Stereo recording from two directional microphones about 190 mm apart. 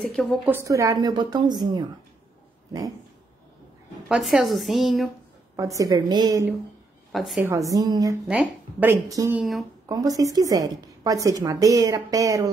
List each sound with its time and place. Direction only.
0.0 s a woman's voice: centre (ahead or behind)
0.5 s a woman's voice: 15° right (ahead or behind)
4.1 s a woman's voice: centre (ahead or behind)
5.6 s a woman's voice: 15° right (ahead or behind)
7.1 s a woman's voice: centre (ahead or behind)
7.4 s speech: 15° right (ahead or behind)
8.3 s speech: 10° right (ahead or behind)
9.4 s a woman's voice: centre (ahead or behind)
9.8 s a woman's voice: 20° right (ahead or behind)